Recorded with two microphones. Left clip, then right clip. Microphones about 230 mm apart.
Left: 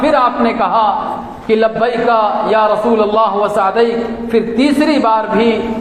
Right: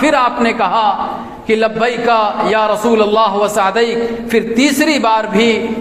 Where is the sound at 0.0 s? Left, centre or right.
Right.